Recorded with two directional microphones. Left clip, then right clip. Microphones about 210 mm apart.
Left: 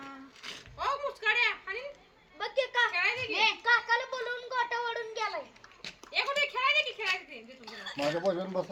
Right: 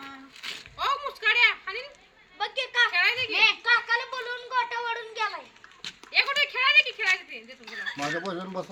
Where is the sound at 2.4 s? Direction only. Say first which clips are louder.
Right 4 dB; 20° right (ahead or behind).